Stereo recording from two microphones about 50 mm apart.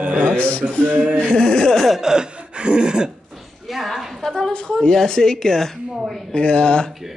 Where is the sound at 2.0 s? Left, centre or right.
Centre.